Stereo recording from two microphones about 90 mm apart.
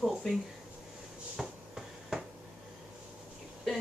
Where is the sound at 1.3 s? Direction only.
5° right (ahead or behind).